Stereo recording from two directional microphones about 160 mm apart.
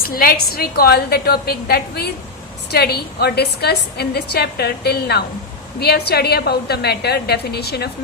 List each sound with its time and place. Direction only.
0.0 s a woman's voice: 65° left (ahead or behind); by 7.9 s 85° left